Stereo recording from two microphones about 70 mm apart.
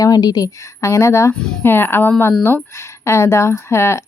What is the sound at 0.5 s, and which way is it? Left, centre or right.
Speech, left.